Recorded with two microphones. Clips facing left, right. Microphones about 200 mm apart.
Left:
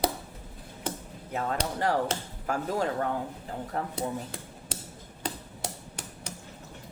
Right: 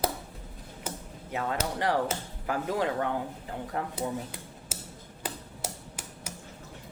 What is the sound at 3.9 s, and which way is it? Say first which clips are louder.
Speech: even; 5° right (ahead or behind).